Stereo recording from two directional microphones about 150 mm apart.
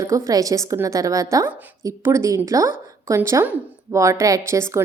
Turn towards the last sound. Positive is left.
turn(degrees=-20)  # may be behind; listen again after turning